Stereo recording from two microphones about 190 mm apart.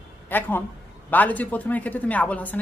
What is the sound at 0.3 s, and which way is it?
Speech, 10° left (ahead or behind).